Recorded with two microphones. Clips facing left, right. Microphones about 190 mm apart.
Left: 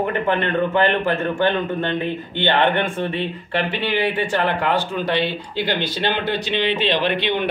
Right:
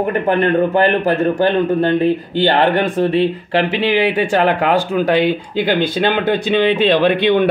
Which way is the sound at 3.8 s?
90° right.